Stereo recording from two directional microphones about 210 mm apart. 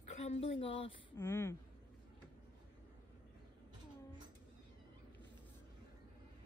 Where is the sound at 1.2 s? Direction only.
15° left (ahead or behind).